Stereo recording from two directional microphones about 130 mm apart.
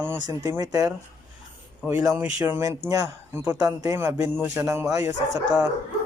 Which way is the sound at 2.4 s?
20° right (ahead or behind).